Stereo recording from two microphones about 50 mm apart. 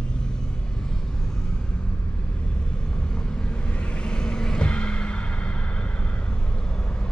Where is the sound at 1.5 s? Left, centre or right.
Left.